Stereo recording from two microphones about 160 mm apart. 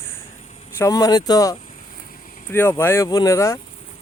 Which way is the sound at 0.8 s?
20° left (ahead or behind).